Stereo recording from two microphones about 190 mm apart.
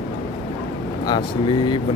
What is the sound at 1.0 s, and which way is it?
Speech, 25° left (ahead or behind).